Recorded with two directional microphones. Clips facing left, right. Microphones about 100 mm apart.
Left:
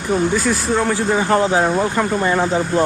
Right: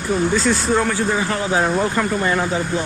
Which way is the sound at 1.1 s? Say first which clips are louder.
Left 6 dB; 35° left (ahead or behind).